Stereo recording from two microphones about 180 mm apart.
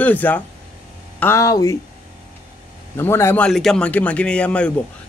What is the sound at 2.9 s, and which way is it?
Speech, 15° left (ahead or behind).